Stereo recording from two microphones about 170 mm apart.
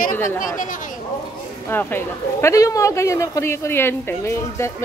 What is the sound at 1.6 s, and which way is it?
A man's voice, 15° left (ahead or behind).